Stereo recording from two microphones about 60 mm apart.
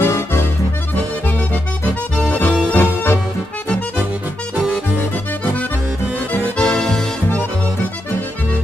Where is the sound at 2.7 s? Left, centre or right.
Left.